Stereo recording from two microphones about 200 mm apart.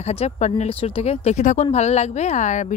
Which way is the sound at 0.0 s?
30° left (ahead or behind).